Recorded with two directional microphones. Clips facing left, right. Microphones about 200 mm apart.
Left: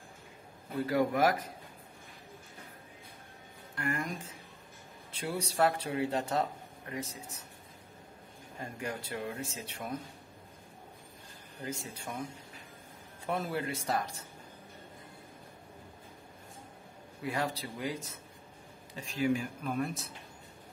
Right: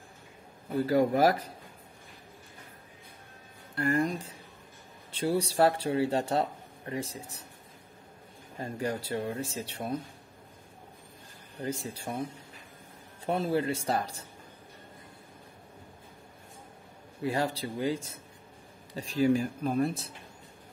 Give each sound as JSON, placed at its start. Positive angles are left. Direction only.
{"t": 0.8, "sound": "speech", "side_deg": -30}
{"t": 3.7, "sound": "speech", "side_deg": -35}
{"t": 8.5, "sound": "speech", "side_deg": -35}
{"t": 11.6, "sound": "speech", "side_deg": -35}
{"t": 17.2, "sound": "speech", "side_deg": -30}